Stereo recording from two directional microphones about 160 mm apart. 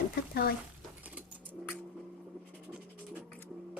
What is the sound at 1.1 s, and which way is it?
Bird, 10° right (ahead or behind).